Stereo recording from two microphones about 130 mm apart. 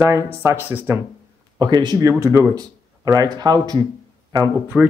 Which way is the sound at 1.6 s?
35° right (ahead or behind).